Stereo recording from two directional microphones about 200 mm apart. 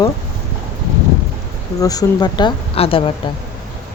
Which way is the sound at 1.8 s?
20° left (ahead or behind).